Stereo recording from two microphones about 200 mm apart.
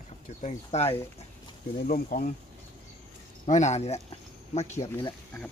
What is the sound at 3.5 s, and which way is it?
Speech, 35° left (ahead or behind).